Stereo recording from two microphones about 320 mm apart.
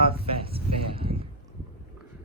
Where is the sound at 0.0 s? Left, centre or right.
Centre.